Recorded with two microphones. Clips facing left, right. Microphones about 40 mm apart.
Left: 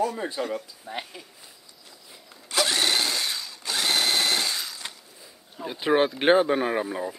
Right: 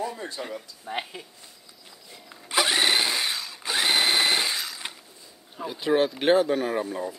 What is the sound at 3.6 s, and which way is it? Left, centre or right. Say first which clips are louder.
Drill: right 2 dB; centre.